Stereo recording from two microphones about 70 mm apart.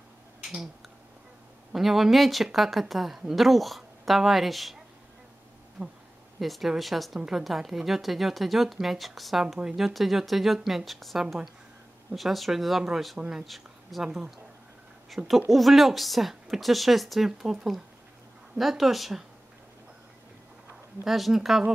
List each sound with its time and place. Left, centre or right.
0.4 s finger snapping: centre
1.7 s a woman's voice: centre
5.8 s speech: right
6.4 s a woman's voice: centre
15.0 s a woman's voice: centre
21.0 s a woman's voice: centre